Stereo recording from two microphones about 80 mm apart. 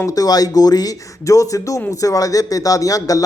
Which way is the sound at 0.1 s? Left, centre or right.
Left.